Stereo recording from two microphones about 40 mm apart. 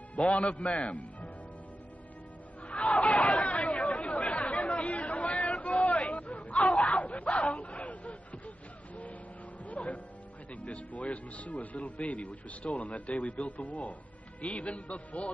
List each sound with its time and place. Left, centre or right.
0.2 s speech: left
2.7 s chatter: left
9.7 s music: left
10.5 s speech: left